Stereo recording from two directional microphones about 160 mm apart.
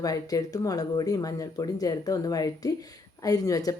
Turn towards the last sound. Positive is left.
turn(degrees=20)  # may be behind; listen again after turning